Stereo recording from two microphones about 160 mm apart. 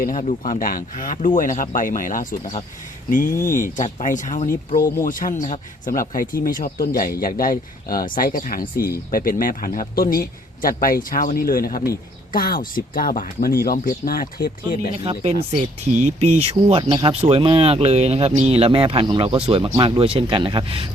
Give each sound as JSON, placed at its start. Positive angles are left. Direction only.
{"t": 0.0, "sound": "speech", "side_deg": 55}
{"t": 14.9, "sound": "speech", "side_deg": -35}